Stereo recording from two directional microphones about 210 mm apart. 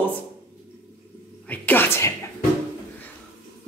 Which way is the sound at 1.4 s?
10° left (ahead or behind).